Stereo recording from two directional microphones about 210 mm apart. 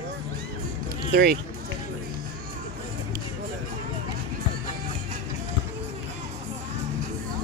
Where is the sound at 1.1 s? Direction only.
50° right (ahead or behind).